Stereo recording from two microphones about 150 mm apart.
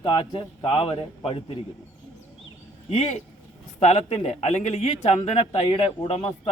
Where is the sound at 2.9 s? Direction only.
45° left (ahead or behind).